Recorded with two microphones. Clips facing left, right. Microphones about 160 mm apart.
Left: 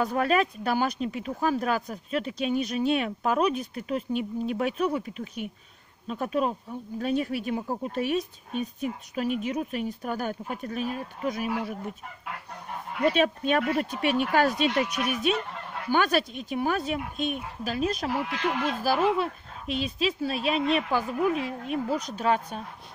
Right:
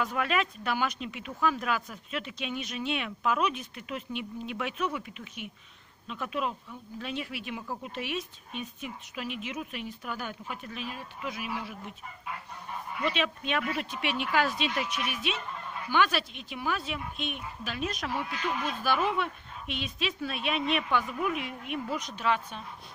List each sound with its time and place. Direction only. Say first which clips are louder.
0.0 s speech: left 5 dB; 35° left (ahead or behind)
13.0 s speech: left 8 dB; 45° left (ahead or behind)
15.5 s fowl: left 2 dB; 70° left (ahead or behind)
15.9 s speech: left 3 dB; 45° left (ahead or behind)
18.1 s speech: left 4 dB; 85° left
18.8 s speech: left 4 dB; 35° left (ahead or behind)